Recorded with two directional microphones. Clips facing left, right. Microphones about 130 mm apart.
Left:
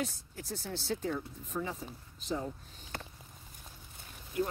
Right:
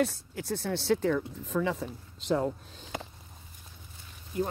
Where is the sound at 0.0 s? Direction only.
70° right (ahead or behind).